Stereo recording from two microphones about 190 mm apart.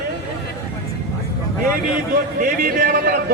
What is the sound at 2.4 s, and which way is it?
Speech, 50° right (ahead or behind).